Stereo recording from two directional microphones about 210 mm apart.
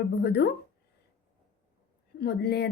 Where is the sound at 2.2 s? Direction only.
50° left (ahead or behind).